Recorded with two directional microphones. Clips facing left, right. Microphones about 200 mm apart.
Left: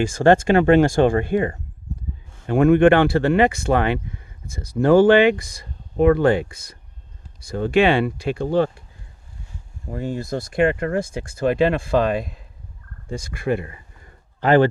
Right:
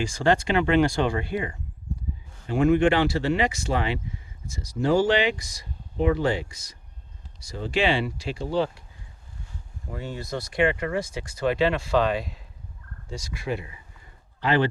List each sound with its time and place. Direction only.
0.0 s speech: 50° left (ahead or behind)
9.9 s speech: 50° left (ahead or behind)